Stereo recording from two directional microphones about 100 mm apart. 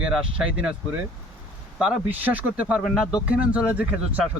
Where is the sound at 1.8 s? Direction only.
10° right (ahead or behind).